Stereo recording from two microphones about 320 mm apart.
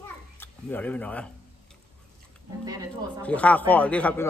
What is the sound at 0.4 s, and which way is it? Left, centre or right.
Speech, centre.